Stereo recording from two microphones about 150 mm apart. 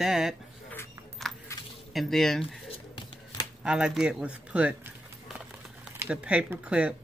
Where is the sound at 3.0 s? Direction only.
35° left (ahead or behind).